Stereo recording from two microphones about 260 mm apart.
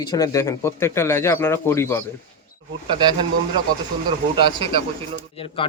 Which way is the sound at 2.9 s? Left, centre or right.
Centre.